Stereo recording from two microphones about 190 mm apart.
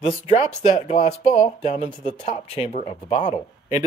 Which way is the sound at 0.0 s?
35° left (ahead or behind).